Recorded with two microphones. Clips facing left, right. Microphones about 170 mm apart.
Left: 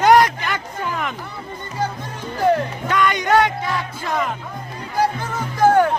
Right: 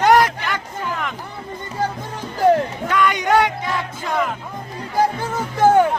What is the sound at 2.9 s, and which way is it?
Music, 10° right (ahead or behind).